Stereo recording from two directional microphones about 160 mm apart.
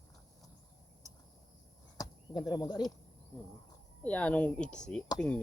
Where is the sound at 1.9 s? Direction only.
25° left (ahead or behind).